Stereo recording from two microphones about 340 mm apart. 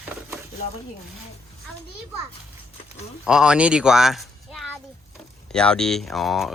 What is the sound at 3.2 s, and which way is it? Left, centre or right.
Speech, centre.